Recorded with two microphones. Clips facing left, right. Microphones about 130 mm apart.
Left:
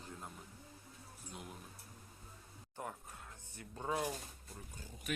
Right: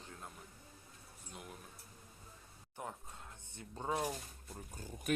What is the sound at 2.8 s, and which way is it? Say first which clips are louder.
Speech: even; 20° right (ahead or behind).